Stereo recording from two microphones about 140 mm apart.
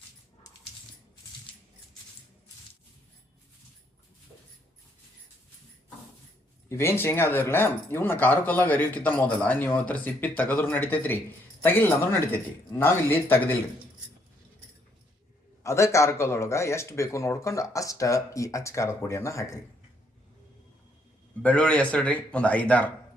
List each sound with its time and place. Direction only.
6.7 s speech: 20° left (ahead or behind)
15.6 s speech: 20° left (ahead or behind)
21.4 s speech: 10° left (ahead or behind)